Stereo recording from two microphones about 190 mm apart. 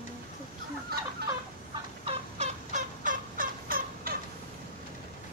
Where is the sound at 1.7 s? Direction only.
35° right (ahead or behind); by 4.2 s 50° right (ahead or behind).